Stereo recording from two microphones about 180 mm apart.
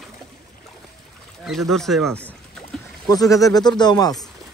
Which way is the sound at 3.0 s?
20° left (ahead or behind).